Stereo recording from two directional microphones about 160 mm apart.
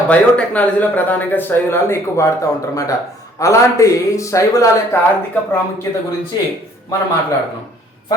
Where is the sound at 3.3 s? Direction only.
20° left (ahead or behind).